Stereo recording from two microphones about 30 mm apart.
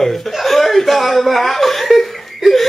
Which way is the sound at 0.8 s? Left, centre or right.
Centre.